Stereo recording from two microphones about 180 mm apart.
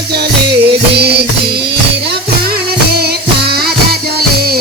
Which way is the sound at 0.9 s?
65° right (ahead or behind).